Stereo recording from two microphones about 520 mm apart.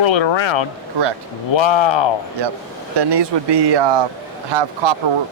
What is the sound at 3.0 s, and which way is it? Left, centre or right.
Speech, right.